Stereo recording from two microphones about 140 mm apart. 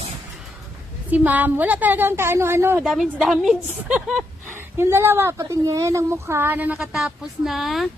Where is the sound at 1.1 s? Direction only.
10° right (ahead or behind).